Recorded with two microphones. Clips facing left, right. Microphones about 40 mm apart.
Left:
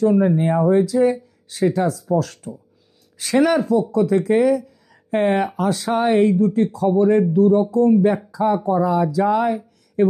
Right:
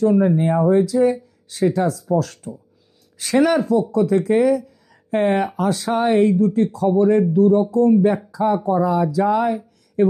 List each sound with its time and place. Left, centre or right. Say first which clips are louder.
0.0 s speech: even; centre